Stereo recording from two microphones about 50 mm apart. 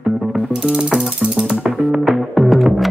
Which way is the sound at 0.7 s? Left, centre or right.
Centre.